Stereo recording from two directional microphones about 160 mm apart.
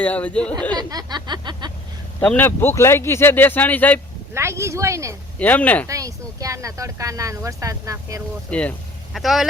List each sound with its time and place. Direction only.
0.0 s speech: 10° left (ahead or behind)
0.8 s speech: 25° right (ahead or behind)
2.2 s speech: 10° left (ahead or behind)
4.4 s speech: 15° right (ahead or behind)
5.4 s speech: 10° left (ahead or behind)
5.9 s speech: 20° right (ahead or behind)
8.4 s speech: 10° left (ahead or behind)